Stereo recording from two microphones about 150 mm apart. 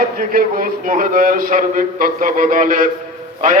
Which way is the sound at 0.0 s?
75° right (ahead or behind).